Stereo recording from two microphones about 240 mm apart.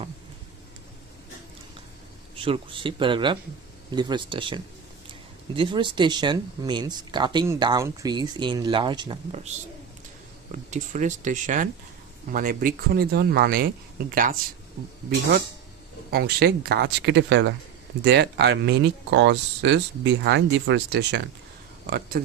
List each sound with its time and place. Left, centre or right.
2.3 s speech: right
10.5 s speech: right
16.1 s speech: right